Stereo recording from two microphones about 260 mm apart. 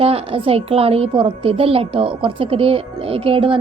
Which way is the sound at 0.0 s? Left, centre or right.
Right.